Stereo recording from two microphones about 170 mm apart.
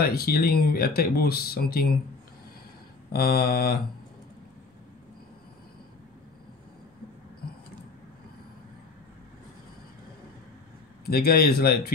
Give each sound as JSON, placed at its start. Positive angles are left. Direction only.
{"t": 0.0, "sound": "speech", "side_deg": 60}
{"t": 3.1, "sound": "speech", "side_deg": 65}
{"t": 11.1, "sound": "speech", "side_deg": 65}